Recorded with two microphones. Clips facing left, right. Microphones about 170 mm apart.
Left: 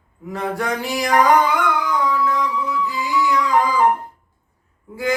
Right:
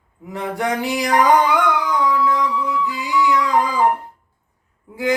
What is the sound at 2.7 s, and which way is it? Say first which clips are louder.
Music: even; 15° right (ahead or behind).